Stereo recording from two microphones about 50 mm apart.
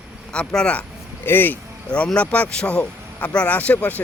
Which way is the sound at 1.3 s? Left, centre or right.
Left.